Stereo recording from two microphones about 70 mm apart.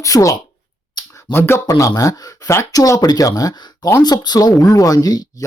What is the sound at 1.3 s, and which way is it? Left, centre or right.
Speech, left.